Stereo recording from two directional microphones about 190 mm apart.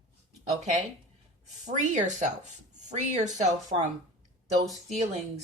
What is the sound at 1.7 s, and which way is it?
Speech, 40° right (ahead or behind).